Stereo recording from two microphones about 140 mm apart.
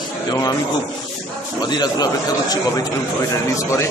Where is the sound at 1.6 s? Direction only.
30° left (ahead or behind).